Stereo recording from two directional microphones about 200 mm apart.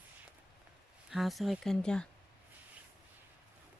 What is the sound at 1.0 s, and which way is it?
Speech, centre (ahead or behind).